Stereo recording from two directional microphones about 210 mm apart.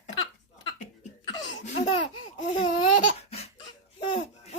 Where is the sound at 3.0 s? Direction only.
30° left (ahead or behind).